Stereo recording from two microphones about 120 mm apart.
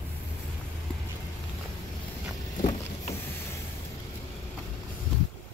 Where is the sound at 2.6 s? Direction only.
90° left.